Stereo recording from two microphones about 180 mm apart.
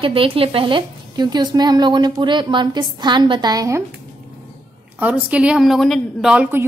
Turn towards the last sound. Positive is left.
turn(degrees=-5)  # may be behind; listen again after turning